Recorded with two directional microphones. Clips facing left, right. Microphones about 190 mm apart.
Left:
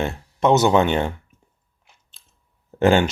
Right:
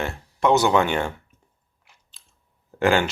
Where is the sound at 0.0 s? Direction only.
20° left (ahead or behind).